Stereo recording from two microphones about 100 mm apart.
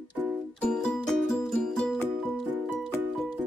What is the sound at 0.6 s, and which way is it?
Music, 5° left (ahead or behind).